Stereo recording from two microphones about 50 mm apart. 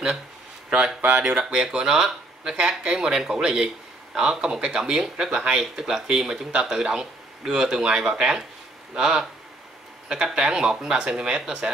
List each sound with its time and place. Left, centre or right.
0.7 s speech: centre